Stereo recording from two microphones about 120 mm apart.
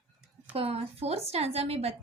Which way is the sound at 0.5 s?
55° right (ahead or behind).